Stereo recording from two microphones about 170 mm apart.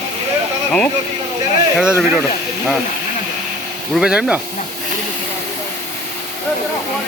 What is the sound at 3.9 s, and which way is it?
Speech, 5° right (ahead or behind).